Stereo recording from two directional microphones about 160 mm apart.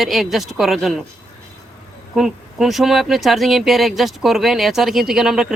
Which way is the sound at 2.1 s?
Centre (ahead or behind).